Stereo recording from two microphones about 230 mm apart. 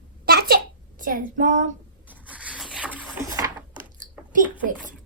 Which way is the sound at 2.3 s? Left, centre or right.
Centre.